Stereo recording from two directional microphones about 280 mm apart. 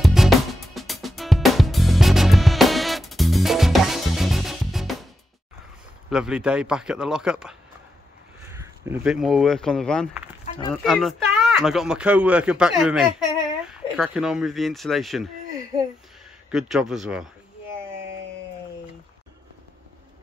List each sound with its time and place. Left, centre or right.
0.0 s music: centre
6.0 s speech: centre
10.4 s a sound: centre
10.7 s speech: centre
16.4 s speech: centre